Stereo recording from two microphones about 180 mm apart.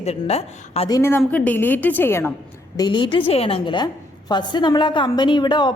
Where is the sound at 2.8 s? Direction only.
25° left (ahead or behind).